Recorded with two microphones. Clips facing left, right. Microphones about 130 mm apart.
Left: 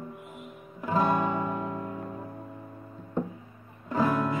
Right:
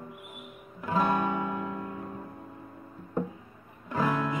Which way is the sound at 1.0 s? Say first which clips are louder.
Left 1 dB; 15° left (ahead or behind).